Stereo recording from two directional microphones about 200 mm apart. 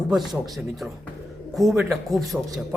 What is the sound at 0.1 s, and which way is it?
Speech, centre (ahead or behind).